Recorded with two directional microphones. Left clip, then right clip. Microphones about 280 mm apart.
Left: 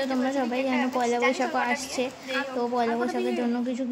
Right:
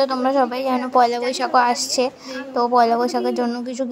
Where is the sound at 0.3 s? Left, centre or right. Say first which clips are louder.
Right 8 dB; right.